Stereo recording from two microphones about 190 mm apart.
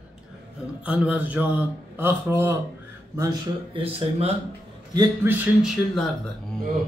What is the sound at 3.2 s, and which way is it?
Speech, 25° right (ahead or behind).